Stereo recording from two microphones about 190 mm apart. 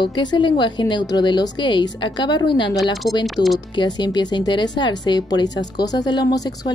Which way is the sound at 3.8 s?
25° left (ahead or behind).